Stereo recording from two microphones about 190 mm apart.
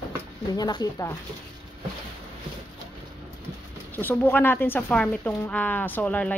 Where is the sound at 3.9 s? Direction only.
10° left (ahead or behind).